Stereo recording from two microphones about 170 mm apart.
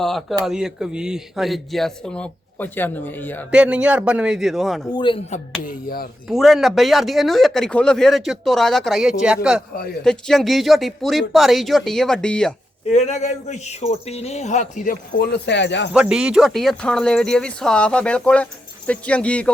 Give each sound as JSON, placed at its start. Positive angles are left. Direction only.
{"t": 0.0, "sound": "speech", "side_deg": 0}
{"t": 3.5, "sound": "speech", "side_deg": -5}
{"t": 4.9, "sound": "speech", "side_deg": 30}
{"t": 5.6, "sound": "speech", "side_deg": 60}
{"t": 6.2, "sound": "speech", "side_deg": 0}
{"t": 9.7, "sound": "speech", "side_deg": 65}
{"t": 10.0, "sound": "speech", "side_deg": 5}
{"t": 12.9, "sound": "speech", "side_deg": 40}
{"t": 15.2, "sound": "speech", "side_deg": 85}
{"t": 15.9, "sound": "speech", "side_deg": -5}